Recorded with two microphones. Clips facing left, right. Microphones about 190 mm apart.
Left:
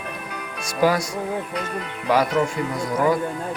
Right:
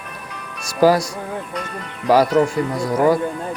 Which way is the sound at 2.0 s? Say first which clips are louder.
Right 5 dB; 35° right (ahead or behind).